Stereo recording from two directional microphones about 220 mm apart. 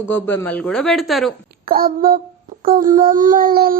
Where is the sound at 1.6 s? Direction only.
40° right (ahead or behind).